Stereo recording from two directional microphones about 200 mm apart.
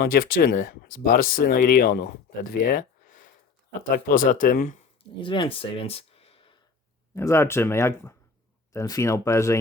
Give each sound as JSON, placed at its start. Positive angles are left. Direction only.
{"t": 0.0, "sound": "speech", "side_deg": 45}
{"t": 5.2, "sound": "speech", "side_deg": 25}
{"t": 7.2, "sound": "speech", "side_deg": 15}